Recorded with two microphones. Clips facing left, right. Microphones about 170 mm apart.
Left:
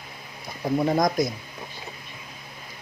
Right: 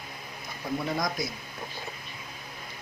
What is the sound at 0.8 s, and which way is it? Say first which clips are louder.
Speech: left 10 dB; 45° left (ahead or behind).